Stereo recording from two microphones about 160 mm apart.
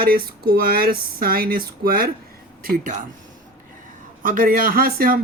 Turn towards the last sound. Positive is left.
turn(degrees=-65)  # may be behind; listen again after turning